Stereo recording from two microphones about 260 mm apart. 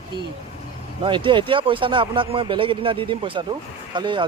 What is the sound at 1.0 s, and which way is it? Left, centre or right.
Speech, centre.